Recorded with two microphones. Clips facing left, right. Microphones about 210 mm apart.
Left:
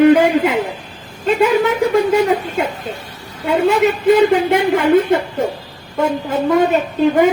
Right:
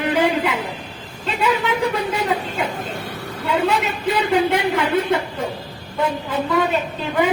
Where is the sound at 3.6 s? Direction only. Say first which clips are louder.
Left 8 dB; 45° left (ahead or behind).